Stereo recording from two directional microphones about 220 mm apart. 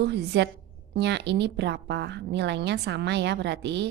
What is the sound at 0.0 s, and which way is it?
A woman's voice, 50° right (ahead or behind).